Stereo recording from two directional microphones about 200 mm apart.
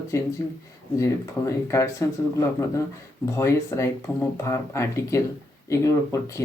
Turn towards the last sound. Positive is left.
turn(degrees=15)  # may be behind; listen again after turning